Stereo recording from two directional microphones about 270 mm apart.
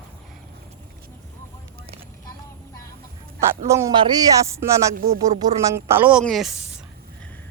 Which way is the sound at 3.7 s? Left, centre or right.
Centre.